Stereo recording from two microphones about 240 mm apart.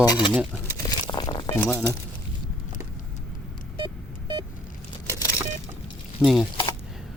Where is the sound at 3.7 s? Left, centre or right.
Centre.